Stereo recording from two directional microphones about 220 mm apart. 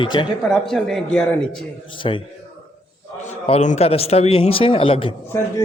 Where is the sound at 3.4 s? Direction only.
30° left (ahead or behind).